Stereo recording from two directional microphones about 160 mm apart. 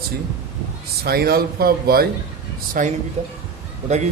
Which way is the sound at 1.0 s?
75° right (ahead or behind).